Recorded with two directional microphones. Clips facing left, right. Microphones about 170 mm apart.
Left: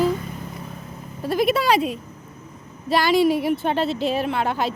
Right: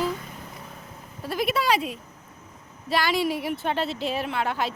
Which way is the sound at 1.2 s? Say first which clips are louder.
Left 6 dB; 50° left (ahead or behind).